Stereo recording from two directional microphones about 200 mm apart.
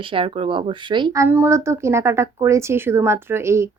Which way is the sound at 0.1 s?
25° right (ahead or behind).